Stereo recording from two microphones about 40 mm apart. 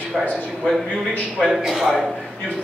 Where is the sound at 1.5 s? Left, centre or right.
Centre.